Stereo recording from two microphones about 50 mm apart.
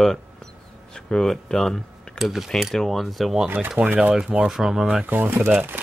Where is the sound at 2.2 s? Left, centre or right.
Centre.